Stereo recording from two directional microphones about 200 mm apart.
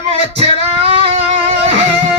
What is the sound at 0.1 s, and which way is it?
Singing, 30° right (ahead or behind).